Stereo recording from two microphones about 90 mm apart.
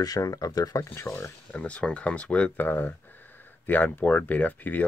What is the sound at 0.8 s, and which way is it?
Speech, 30° left (ahead or behind).